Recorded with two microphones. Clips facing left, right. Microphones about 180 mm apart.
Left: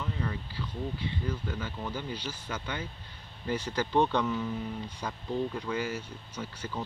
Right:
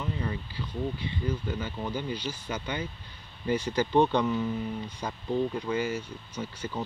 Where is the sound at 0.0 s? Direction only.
10° right (ahead or behind).